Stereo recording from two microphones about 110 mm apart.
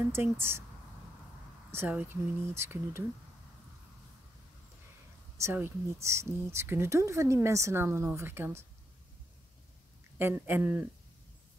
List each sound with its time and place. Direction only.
0.1 s speech: 20° right (ahead or behind)
1.7 s speech: 20° right (ahead or behind)
5.4 s speech: 20° right (ahead or behind)
10.1 s speech: 20° right (ahead or behind)